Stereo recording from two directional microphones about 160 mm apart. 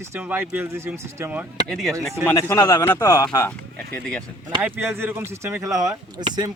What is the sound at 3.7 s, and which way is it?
Speech, 5° left (ahead or behind).